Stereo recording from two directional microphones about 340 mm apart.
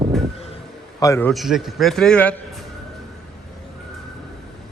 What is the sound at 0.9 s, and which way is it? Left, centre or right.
A man's voice, centre.